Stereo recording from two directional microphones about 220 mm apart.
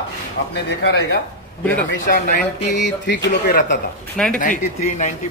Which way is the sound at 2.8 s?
50° left (ahead or behind).